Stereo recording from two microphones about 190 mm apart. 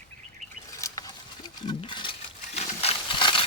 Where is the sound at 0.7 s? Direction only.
15° left (ahead or behind).